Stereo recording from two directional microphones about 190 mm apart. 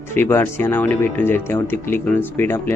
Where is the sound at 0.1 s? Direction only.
10° left (ahead or behind).